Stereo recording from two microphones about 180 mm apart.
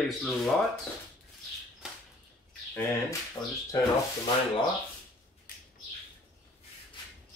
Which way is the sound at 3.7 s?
20° left (ahead or behind).